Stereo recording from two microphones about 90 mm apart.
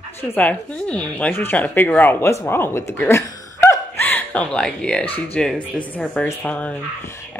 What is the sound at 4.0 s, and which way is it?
Speech, 20° left (ahead or behind).